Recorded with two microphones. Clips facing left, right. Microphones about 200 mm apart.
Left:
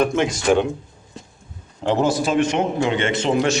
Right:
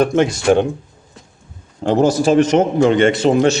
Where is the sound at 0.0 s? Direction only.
40° right (ahead or behind).